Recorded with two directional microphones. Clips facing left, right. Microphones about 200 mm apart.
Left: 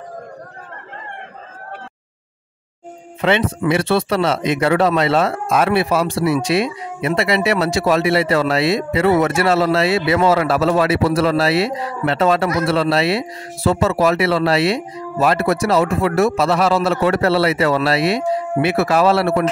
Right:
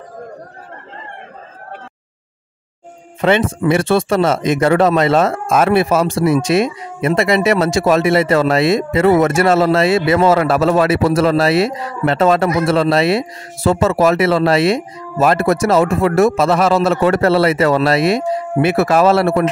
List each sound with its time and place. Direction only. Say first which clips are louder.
3.2 s speech: right 3 dB; 45° right (ahead or behind)